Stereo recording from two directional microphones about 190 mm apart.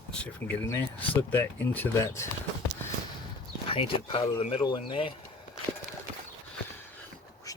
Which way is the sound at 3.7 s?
30° left (ahead or behind).